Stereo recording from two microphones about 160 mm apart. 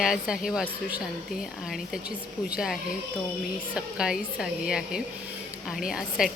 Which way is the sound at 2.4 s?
5° right (ahead or behind).